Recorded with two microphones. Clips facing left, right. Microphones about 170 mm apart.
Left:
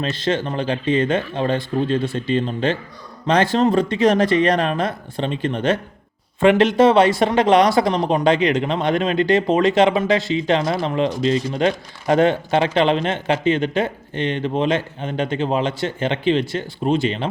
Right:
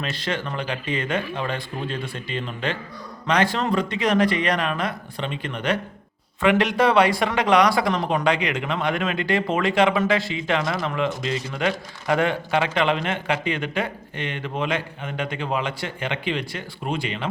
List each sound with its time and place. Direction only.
0.0 s speech: 25° left (ahead or behind)